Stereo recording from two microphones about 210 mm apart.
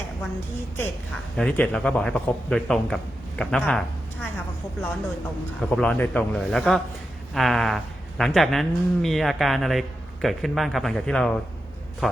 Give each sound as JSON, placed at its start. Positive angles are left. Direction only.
{"t": 1.4, "sound": "speech", "side_deg": 5}